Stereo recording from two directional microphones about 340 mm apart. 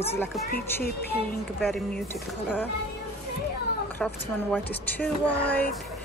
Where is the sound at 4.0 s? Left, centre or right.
Centre.